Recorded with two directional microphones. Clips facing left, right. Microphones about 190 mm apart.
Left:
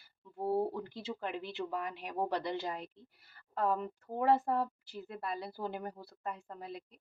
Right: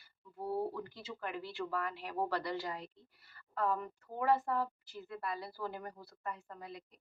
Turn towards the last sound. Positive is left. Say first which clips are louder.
# left 3 dB
turn(degrees=30)  # may be behind; listen again after turning